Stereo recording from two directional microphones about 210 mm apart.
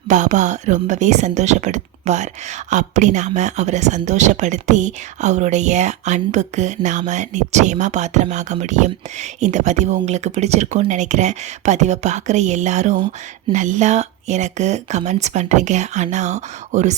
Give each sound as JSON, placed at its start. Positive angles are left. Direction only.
{"t": 0.1, "sound": "speech", "side_deg": -35}